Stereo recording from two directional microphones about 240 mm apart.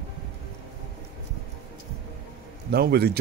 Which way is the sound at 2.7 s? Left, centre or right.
Right.